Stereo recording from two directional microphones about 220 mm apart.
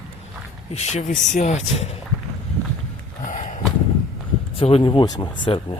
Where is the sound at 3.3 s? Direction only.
35° left (ahead or behind).